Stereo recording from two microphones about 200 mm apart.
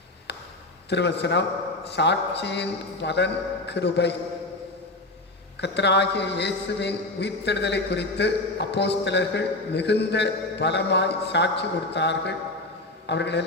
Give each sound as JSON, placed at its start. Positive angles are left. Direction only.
{"t": 0.3, "sound": "a sound", "side_deg": 55}
{"t": 0.9, "sound": "a man's voice", "side_deg": 60}
{"t": 5.5, "sound": "a man's voice", "side_deg": 60}